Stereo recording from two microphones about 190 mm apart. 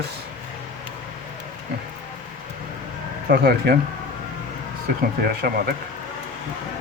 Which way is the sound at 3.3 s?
55° right (ahead or behind).